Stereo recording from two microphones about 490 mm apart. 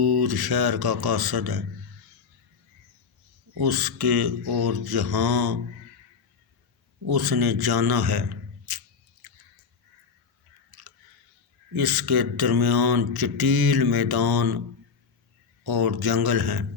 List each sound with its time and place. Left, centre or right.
0.0 s speech: right
3.6 s speech: right
7.0 s speech: right
10.7 s chewing: right
11.7 s speech: right
15.6 s speech: right